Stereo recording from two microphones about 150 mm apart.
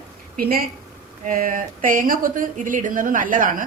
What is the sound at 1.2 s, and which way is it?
A woman's voice, 65° right (ahead or behind).